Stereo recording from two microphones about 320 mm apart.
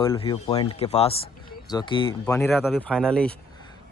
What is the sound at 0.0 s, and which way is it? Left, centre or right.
Speech, centre.